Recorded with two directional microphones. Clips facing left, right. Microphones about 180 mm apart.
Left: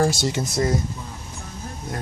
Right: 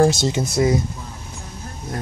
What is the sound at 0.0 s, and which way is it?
Speech, 20° right (ahead or behind).